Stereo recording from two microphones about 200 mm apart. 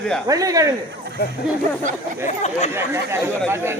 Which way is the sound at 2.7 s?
10° right (ahead or behind).